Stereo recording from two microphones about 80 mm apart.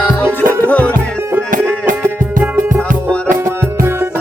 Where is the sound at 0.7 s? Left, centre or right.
Centre.